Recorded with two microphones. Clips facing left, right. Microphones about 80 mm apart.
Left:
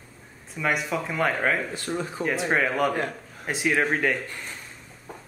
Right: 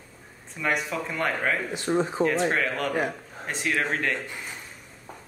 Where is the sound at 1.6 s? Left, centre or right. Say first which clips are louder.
Right 5 dB; right.